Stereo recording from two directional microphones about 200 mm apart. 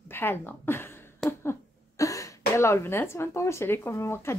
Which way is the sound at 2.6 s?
10° left (ahead or behind).